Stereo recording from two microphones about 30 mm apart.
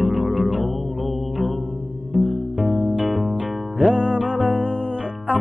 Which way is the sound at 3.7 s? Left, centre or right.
Right.